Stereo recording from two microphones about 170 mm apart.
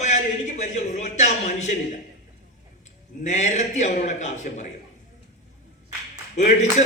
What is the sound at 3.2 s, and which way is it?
A man's voice, 45° left (ahead or behind).